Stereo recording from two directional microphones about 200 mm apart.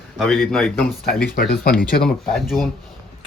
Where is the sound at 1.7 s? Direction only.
45° left (ahead or behind).